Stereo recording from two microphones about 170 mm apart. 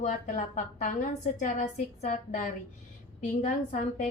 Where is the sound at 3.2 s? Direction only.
45° left (ahead or behind).